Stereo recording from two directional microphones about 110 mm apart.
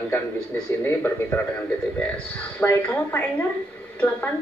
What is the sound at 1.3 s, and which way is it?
Speech, 15° left (ahead or behind).